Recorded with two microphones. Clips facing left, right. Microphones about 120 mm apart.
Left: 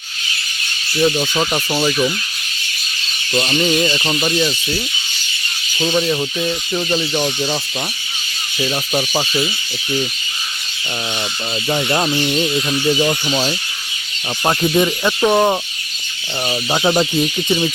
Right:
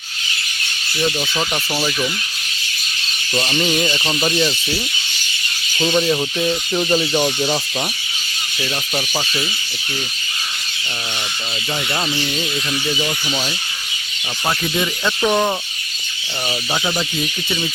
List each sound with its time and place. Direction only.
1.0 s speech: 10° left (ahead or behind)
3.3 s speech: centre (ahead or behind)
5.8 s speech: centre (ahead or behind)
9.0 s speech: 15° left (ahead or behind)
11.7 s speech: 25° left (ahead or behind)
16.8 s speech: 35° left (ahead or behind)